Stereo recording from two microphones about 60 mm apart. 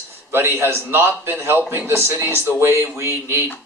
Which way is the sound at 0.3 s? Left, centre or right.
Right.